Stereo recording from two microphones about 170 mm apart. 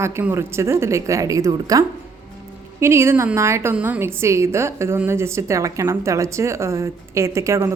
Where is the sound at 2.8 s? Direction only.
15° right (ahead or behind).